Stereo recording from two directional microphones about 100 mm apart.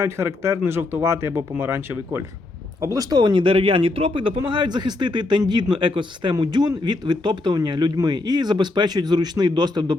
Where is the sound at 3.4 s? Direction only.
65° right (ahead or behind).